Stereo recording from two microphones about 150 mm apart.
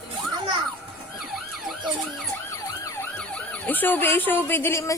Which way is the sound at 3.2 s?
10° left (ahead or behind).